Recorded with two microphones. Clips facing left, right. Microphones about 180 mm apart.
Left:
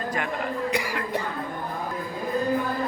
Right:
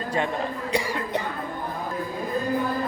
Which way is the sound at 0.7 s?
25° right (ahead or behind).